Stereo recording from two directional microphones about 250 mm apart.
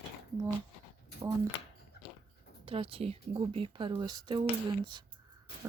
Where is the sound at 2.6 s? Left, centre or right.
Right.